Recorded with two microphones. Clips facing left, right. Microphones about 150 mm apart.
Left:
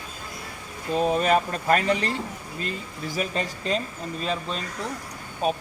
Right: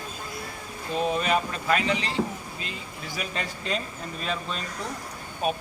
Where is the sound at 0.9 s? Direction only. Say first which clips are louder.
Left 4 dB; 40° left (ahead or behind).